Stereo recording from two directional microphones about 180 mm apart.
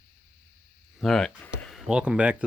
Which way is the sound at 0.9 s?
Centre (ahead or behind).